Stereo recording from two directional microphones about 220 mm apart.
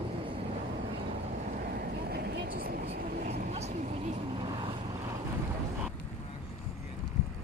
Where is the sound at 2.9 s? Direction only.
30° right (ahead or behind).